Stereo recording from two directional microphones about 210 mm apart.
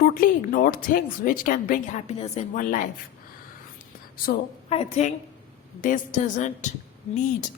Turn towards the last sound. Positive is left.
turn(degrees=35)  # may be behind; listen again after turning